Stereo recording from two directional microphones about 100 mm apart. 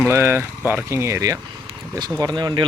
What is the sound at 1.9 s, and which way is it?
Speech, 45° right (ahead or behind).